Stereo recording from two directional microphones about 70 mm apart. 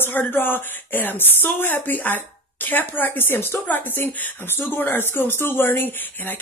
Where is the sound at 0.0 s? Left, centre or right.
Left.